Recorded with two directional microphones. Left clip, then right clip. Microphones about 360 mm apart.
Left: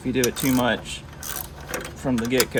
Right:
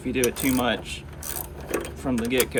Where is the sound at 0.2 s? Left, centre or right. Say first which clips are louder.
Left 1 dB; left.